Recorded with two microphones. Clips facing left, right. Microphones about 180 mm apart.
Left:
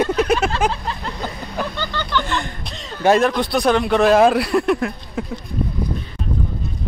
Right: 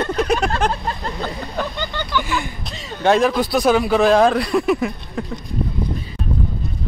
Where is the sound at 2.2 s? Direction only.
5° right (ahead or behind).